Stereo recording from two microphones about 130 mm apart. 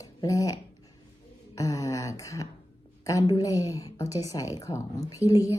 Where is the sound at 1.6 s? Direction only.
25° left (ahead or behind).